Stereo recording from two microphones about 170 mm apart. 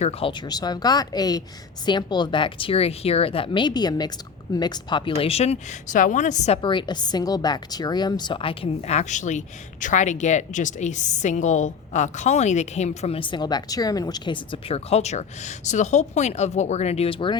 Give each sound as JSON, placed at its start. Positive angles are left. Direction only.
{"t": 0.0, "sound": "a woman's voice", "side_deg": 35}
{"t": 6.6, "sound": "a woman's voice", "side_deg": 30}